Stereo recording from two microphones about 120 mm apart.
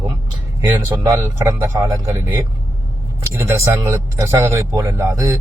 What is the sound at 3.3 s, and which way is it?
Speech, 25° right (ahead or behind).